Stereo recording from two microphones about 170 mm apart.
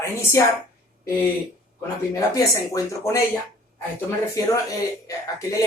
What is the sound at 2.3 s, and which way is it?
Speech, 20° left (ahead or behind).